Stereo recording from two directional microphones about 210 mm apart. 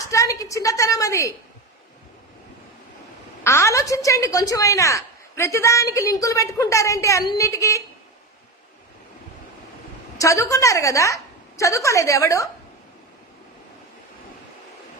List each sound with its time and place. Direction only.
0.0 s a sound: 15° left (ahead or behind)
3.4 s a woman's voice: 15° left (ahead or behind)
10.2 s a woman's voice: 15° left (ahead or behind)